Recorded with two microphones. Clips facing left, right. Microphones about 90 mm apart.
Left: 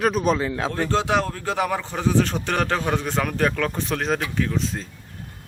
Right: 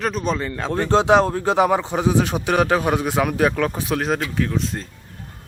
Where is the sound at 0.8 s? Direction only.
25° right (ahead or behind).